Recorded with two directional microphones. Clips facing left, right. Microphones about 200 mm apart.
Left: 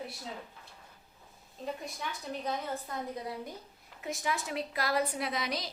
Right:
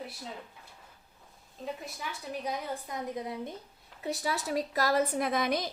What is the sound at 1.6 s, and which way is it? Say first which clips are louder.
A woman's voice: even; 5° right (ahead or behind).